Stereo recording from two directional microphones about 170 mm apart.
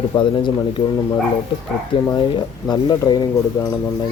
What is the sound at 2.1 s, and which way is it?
Speech, 25° left (ahead or behind).